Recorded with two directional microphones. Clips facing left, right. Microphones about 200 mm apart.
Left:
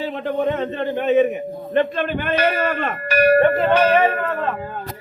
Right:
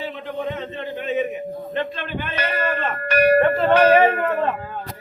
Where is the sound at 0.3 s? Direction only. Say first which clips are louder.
Left 8 dB; 55° left (ahead or behind).